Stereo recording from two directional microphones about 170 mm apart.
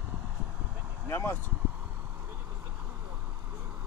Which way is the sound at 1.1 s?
15° left (ahead or behind).